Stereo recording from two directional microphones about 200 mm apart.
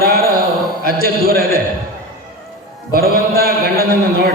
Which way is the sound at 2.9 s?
50° right (ahead or behind).